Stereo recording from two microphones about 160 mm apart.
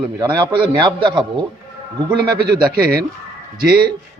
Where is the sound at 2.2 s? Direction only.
70° right (ahead or behind).